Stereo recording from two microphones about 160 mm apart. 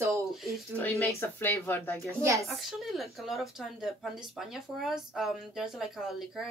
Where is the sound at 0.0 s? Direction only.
15° right (ahead or behind).